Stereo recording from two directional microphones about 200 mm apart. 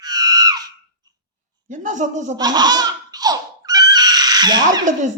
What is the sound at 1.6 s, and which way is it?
Speech, 40° right (ahead or behind).